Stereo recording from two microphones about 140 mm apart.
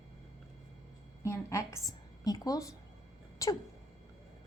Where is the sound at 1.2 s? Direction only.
20° left (ahead or behind).